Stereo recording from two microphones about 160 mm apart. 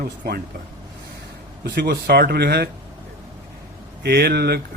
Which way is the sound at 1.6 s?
85° right.